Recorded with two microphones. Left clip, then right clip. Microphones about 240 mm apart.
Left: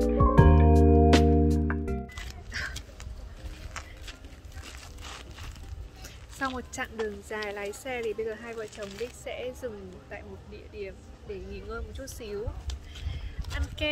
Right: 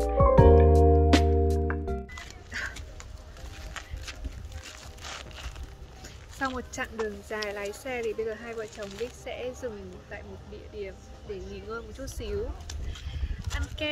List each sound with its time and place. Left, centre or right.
0.0 s music: centre
2.5 s a sound: centre
3.8 s horse: centre
5.0 s a sound: centre
6.0 s speech: centre
10.8 s speech: centre